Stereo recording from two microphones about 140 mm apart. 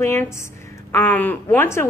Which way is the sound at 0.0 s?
20° left (ahead or behind).